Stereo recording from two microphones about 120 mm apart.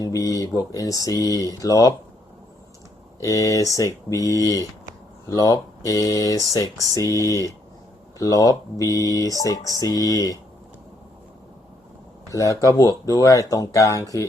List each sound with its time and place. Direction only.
0.0 s speech: 30° left (ahead or behind)
3.2 s speech: 30° left (ahead or behind)
12.3 s speech: 30° left (ahead or behind)